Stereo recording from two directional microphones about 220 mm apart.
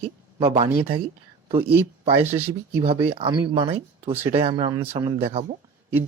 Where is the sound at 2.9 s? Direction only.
25° right (ahead or behind).